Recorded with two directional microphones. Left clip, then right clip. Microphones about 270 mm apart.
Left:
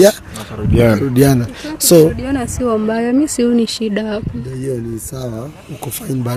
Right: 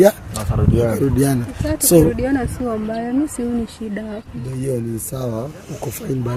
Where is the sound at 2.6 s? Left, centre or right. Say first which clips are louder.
Left 7 dB; left.